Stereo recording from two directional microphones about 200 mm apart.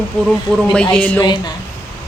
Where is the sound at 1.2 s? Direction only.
25° left (ahead or behind).